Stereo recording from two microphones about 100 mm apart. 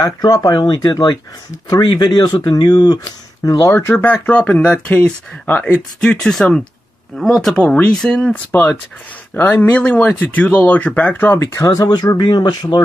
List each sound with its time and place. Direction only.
0.0 s speech: 40° left (ahead or behind)
1.8 s speech: 50° left (ahead or behind); by 3.7 s 35° left (ahead or behind)
3.7 s speech: 20° left (ahead or behind)
11.5 s speech: 35° left (ahead or behind)